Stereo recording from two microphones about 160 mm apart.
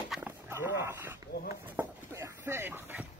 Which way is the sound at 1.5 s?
15° right (ahead or behind).